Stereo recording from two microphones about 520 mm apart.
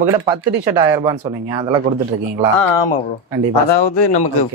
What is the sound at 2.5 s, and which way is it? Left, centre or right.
Speech, left.